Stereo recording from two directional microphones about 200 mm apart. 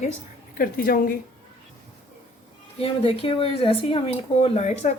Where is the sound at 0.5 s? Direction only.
45° left (ahead or behind).